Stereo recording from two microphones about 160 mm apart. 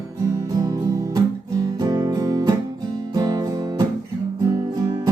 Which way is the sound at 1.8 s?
25° right (ahead or behind).